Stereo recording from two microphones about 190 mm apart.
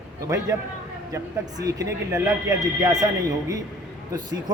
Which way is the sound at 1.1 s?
20° right (ahead or behind).